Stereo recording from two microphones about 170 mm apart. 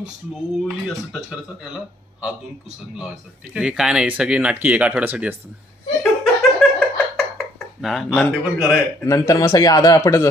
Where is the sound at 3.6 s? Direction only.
5° right (ahead or behind).